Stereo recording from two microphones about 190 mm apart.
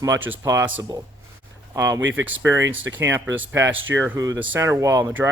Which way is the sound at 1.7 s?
15° right (ahead or behind).